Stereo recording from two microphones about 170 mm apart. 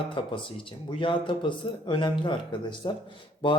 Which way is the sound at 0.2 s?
30° left (ahead or behind).